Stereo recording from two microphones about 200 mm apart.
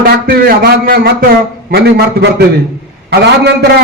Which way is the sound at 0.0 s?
50° right (ahead or behind).